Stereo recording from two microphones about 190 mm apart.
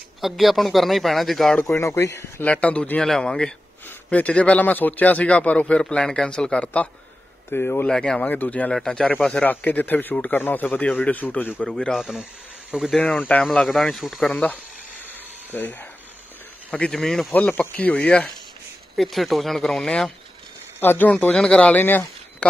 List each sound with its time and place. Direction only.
0.2 s speech: centre (ahead or behind)